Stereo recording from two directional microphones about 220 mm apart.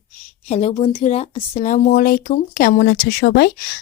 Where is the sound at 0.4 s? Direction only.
30° left (ahead or behind).